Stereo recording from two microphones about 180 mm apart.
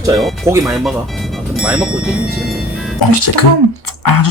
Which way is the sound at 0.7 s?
Centre (ahead or behind).